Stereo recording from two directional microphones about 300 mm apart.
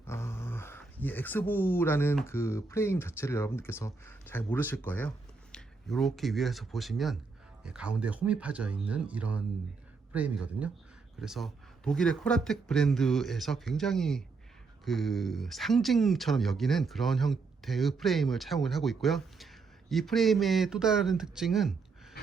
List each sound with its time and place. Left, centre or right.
0.0 s speech: centre